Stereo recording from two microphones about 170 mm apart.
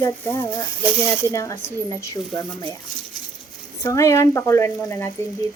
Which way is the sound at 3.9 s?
20° left (ahead or behind).